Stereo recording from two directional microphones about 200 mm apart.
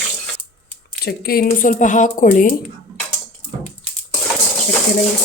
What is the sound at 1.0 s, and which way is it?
Speech, 50° left (ahead or behind).